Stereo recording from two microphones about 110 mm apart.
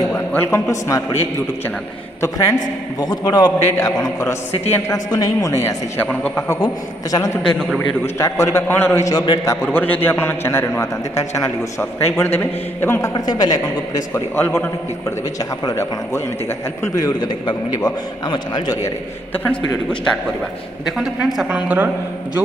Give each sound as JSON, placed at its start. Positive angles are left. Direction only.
{"t": 0.1, "sound": "a man's voice", "side_deg": 20}
{"t": 3.6, "sound": "a man's voice", "side_deg": 25}
{"t": 6.0, "sound": "a man's voice", "side_deg": 15}
{"t": 6.6, "sound": "a man's voice", "side_deg": 35}
{"t": 7.4, "sound": "a man's voice", "side_deg": 5}
{"t": 8.0, "sound": "a man's voice", "side_deg": 25}
{"t": 9.1, "sound": "a man's voice", "side_deg": 45}
{"t": 9.4, "sound": "a man's voice", "side_deg": 25}
{"t": 13.1, "sound": "a man's voice", "side_deg": 35}
{"t": 14.3, "sound": "a man's voice", "side_deg": 20}
{"t": 16.9, "sound": "a man's voice", "side_deg": 40}
{"t": 20.8, "sound": "a woman's voice", "side_deg": 0}